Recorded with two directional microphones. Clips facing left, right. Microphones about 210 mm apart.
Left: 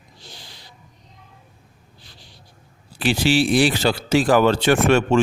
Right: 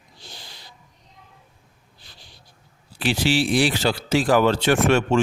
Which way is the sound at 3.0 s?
55° left (ahead or behind).